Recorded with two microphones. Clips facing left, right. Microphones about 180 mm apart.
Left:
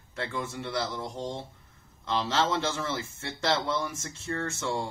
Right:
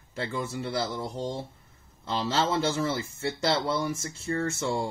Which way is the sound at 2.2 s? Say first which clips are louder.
Right 2 dB; 35° right (ahead or behind).